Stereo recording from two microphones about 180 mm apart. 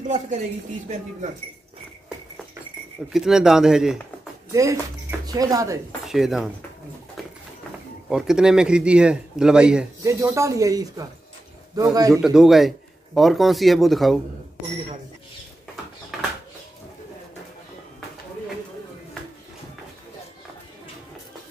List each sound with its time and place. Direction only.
3.1 s speech: centre (ahead or behind)
4.5 s speech: 20° right (ahead or behind)
6.0 s speech: centre (ahead or behind)
8.1 s speech: 5° right (ahead or behind)
10.0 s a man's voice: 15° right (ahead or behind)
12.2 s speech: 5° right (ahead or behind)
16.1 s a sound: centre (ahead or behind)